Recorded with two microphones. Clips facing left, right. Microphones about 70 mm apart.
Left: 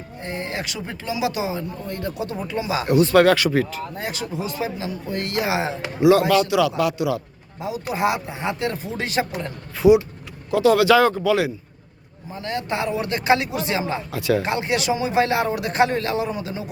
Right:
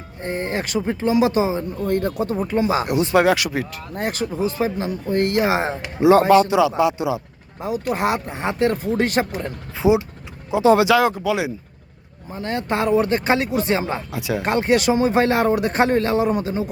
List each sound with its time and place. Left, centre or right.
0.3 s a man's voice: right
0.9 s a man's voice: right
1.8 s speech: right
2.8 s speech: centre
3.9 s a man's voice: right
7.6 s speech: right
9.7 s speech: right
10.8 s speech: centre
12.4 s a man's voice: right
14.1 s speech: centre
14.4 s a man's voice: right